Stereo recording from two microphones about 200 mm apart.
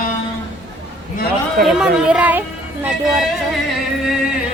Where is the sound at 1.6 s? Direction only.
5° right (ahead or behind).